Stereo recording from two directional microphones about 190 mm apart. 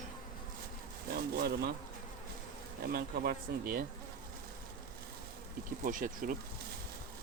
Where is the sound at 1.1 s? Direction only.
55° right (ahead or behind).